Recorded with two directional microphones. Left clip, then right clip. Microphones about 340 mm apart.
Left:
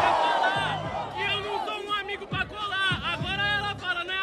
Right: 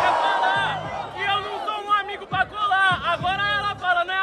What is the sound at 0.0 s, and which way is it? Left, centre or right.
Music, centre.